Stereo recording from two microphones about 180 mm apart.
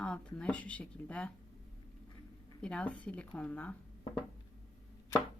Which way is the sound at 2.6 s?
5° left (ahead or behind).